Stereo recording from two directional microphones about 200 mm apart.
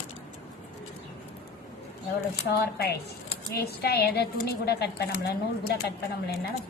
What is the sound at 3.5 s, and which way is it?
A woman's voice, 50° left (ahead or behind).